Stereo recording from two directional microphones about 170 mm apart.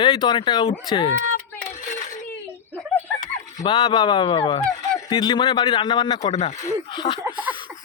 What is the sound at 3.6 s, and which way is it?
Speech, 30° left (ahead or behind).